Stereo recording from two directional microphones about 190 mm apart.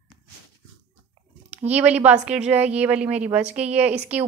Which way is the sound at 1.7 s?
10° right (ahead or behind).